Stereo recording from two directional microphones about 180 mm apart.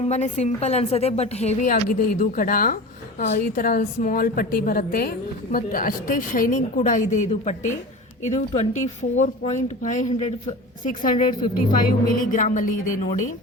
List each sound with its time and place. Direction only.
0.0 s a woman's voice: 40° left (ahead or behind)